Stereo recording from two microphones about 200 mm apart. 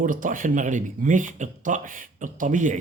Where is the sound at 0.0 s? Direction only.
40° right (ahead or behind).